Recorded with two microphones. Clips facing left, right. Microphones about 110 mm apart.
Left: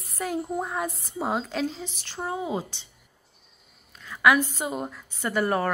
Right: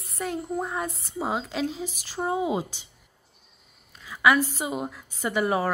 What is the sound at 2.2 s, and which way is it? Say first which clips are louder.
Speech: right 3 dB; 15° right (ahead or behind).